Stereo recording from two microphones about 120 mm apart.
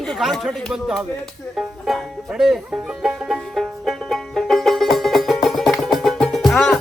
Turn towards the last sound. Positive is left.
turn(degrees=0)  # may be behind; listen again after turning